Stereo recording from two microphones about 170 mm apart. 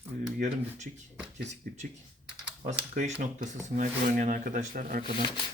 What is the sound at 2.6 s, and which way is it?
Speech, 45° right (ahead or behind).